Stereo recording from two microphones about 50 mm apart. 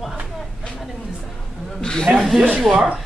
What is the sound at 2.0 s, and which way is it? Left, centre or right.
Speech, centre.